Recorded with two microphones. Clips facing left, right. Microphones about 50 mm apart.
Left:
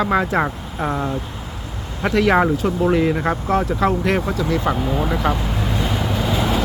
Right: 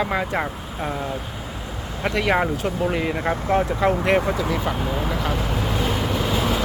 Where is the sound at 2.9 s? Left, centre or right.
Centre.